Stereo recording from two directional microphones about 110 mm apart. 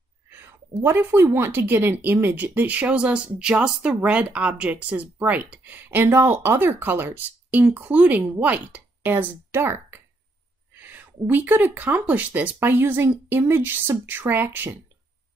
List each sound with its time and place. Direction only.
0.3 s speech: 20° right (ahead or behind)
10.7 s a sound: 15° right (ahead or behind)
11.2 s speech: 15° right (ahead or behind)